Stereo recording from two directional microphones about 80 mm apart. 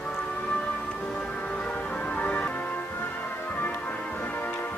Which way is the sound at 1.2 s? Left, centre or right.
Centre.